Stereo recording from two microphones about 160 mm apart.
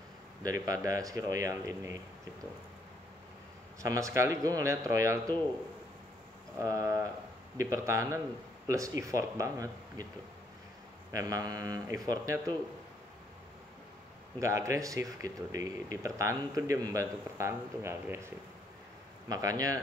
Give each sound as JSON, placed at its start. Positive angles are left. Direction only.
{"t": 0.4, "sound": "speech", "side_deg": -20}
{"t": 3.8, "sound": "speech", "side_deg": -20}
{"t": 6.6, "sound": "speech", "side_deg": -20}
{"t": 11.1, "sound": "speech", "side_deg": -20}
{"t": 14.4, "sound": "speech", "side_deg": -20}